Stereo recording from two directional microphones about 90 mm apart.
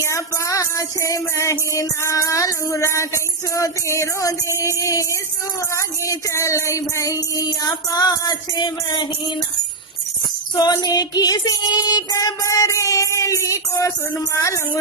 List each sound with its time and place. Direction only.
0.0 s music: 35° left (ahead or behind); by 9.0 s 50° left (ahead or behind)
10.5 s music: 45° left (ahead or behind)